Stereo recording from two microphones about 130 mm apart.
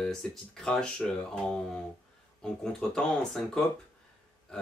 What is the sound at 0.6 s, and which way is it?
Speech, 5° left (ahead or behind).